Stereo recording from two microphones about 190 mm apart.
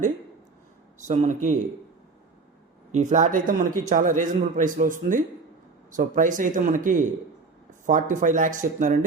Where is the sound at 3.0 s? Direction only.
40° right (ahead or behind).